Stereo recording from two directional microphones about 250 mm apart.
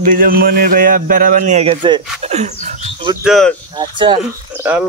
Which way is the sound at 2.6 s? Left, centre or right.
Right.